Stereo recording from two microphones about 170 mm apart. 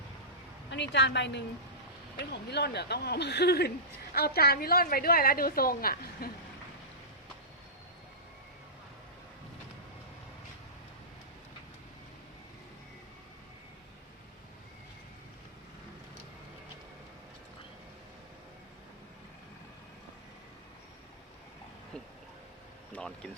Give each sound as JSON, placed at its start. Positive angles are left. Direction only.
{"t": 0.7, "sound": "a woman's voice", "side_deg": 90}
{"t": 2.1, "sound": "a woman's voice", "side_deg": 80}
{"t": 22.9, "sound": "a sound", "side_deg": 5}